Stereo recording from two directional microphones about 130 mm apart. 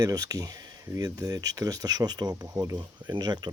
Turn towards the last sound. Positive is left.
turn(degrees=-35)  # may be behind; listen again after turning